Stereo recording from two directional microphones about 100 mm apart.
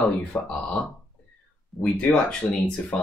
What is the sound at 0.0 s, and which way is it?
Speech, 15° left (ahead or behind).